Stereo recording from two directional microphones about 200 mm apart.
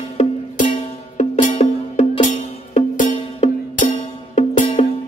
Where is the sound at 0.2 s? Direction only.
35° left (ahead or behind).